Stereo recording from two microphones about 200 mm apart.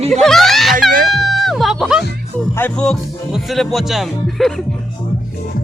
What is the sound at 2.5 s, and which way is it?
Speech, 5° left (ahead or behind).